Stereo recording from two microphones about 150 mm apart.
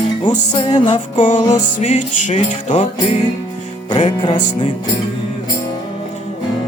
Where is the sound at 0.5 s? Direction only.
30° left (ahead or behind).